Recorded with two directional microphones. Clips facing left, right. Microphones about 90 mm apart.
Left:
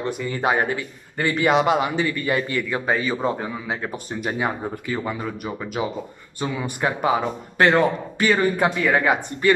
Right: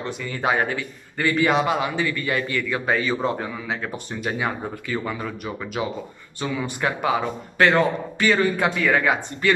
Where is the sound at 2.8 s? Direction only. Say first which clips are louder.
Right 1 dB; 15° left (ahead or behind).